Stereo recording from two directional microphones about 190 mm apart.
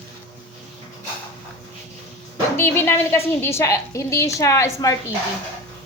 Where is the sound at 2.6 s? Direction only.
15° left (ahead or behind).